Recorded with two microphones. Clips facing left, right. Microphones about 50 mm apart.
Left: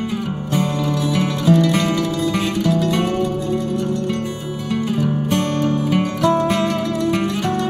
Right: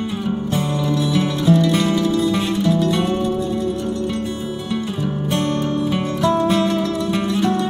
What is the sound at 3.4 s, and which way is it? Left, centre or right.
Music, centre.